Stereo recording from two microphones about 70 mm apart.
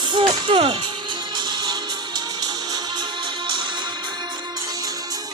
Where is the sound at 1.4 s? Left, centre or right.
Right.